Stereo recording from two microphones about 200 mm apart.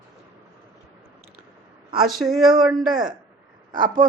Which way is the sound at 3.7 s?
45° right (ahead or behind).